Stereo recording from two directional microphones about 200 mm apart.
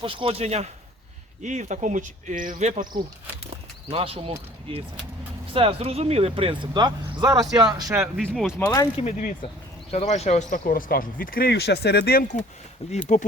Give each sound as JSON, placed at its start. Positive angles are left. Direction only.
{"t": 0.0, "sound": "speech", "side_deg": -25}
{"t": 3.9, "sound": "speech", "side_deg": -30}
{"t": 8.0, "sound": "speech", "side_deg": 0}
{"t": 8.5, "sound": "speech", "side_deg": 15}
{"t": 9.0, "sound": "speech", "side_deg": 35}
{"t": 12.8, "sound": "speech", "side_deg": 30}